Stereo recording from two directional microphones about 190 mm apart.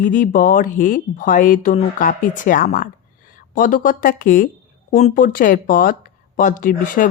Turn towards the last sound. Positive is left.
turn(degrees=45)  # may be behind; listen again after turning